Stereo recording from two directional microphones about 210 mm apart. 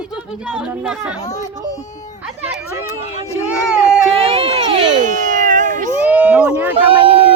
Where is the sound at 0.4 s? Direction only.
5° right (ahead or behind).